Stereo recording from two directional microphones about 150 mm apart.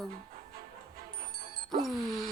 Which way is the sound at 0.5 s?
75° right (ahead or behind).